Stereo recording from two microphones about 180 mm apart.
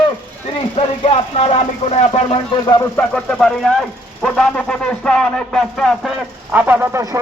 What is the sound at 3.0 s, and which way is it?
Speech, 5° left (ahead or behind).